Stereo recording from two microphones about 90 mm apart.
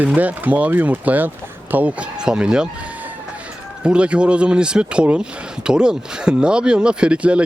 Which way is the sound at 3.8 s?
10° right (ahead or behind).